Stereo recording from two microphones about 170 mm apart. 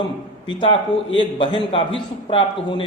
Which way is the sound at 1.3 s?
30° left (ahead or behind).